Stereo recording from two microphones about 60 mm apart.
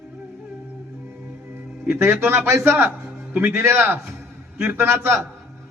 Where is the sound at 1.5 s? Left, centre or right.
Right.